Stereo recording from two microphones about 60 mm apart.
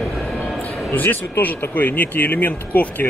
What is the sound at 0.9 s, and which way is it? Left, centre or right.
Speech, left.